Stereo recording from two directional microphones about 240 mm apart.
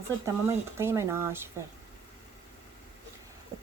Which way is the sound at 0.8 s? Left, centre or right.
Centre.